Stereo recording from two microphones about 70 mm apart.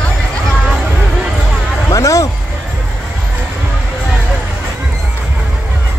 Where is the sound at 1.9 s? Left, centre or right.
Left.